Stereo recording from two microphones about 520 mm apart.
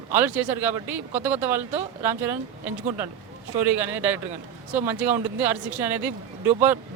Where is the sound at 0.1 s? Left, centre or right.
Centre.